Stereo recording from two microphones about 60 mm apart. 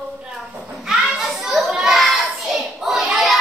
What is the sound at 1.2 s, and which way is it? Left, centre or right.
Child singing, centre.